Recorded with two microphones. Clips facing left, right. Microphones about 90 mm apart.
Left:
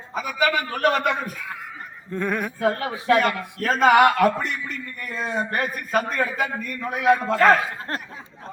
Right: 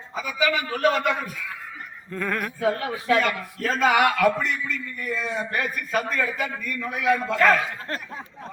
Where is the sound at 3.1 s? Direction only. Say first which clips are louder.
Left 3 dB; 40° left (ahead or behind).